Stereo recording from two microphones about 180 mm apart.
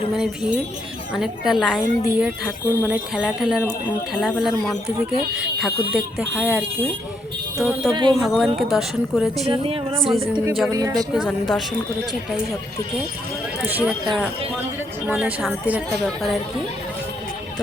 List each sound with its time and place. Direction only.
0.2 s a woman's voice: 5° right (ahead or behind)
7.9 s speech: 25° right (ahead or behind)
8.2 s a woman's voice: 5° right (ahead or behind)
9.5 s speech: 30° right (ahead or behind)
10.3 s a woman's voice: 5° right (ahead or behind)
10.7 s speech: 20° right (ahead or behind)
11.1 s a woman's voice: centre (ahead or behind)
13.6 s speech: 5° right (ahead or behind)
15.0 s speech: 5° right (ahead or behind)